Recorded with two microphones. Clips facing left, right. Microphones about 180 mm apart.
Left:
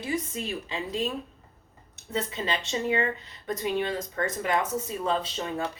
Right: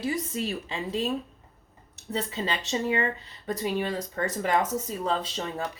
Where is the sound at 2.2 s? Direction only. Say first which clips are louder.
Left 1 dB; 35° right (ahead or behind).